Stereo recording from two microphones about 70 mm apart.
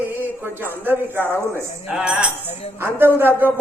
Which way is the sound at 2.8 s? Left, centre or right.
Right.